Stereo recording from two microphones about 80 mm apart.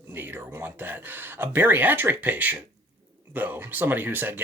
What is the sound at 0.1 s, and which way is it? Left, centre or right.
Speech, right.